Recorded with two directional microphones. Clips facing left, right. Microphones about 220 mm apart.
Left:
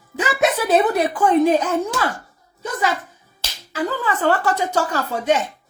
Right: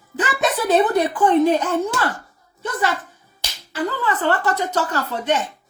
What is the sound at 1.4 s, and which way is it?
Speech, 10° left (ahead or behind).